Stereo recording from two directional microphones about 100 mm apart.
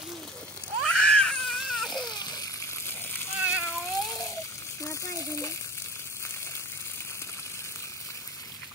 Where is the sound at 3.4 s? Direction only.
15° right (ahead or behind).